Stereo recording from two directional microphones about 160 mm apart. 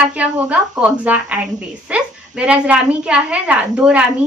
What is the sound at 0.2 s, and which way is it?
A woman's voice, 10° right (ahead or behind).